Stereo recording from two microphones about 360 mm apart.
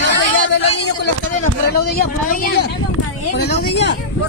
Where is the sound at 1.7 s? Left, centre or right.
Left.